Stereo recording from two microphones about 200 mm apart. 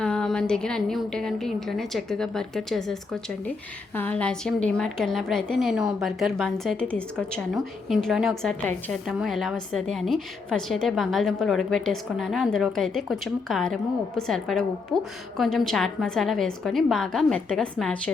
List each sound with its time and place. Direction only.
0.0 s a woman's voice: 5° left (ahead or behind)